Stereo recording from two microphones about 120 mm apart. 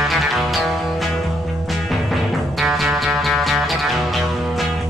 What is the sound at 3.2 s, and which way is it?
Music, centre (ahead or behind).